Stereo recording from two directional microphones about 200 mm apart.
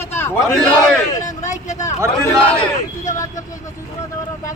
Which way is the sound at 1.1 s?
15° left (ahead or behind).